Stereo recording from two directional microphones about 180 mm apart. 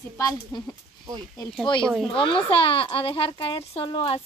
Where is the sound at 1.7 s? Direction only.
25° left (ahead or behind).